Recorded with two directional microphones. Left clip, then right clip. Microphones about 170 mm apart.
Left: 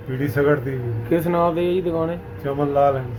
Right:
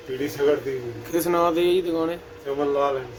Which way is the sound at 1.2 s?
15° right (ahead or behind).